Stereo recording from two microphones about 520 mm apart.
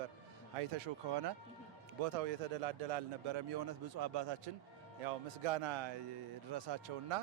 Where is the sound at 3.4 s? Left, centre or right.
Right.